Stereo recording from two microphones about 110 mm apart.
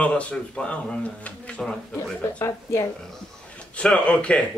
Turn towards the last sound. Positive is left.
turn(degrees=10)  # may be behind; listen again after turning